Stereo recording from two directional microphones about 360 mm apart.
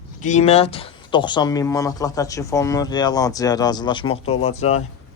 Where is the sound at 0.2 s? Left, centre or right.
Centre.